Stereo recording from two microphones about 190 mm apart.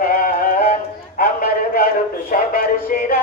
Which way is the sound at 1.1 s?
50° left (ahead or behind).